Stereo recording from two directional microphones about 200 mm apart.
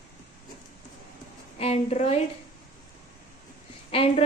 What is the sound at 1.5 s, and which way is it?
Speech, 30° left (ahead or behind).